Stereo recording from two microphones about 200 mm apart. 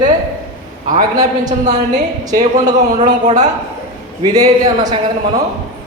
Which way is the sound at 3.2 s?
35° right (ahead or behind).